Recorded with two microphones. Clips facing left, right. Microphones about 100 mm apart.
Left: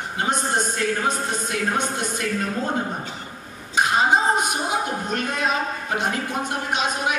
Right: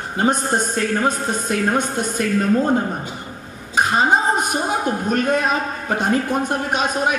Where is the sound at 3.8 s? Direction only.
45° right (ahead or behind).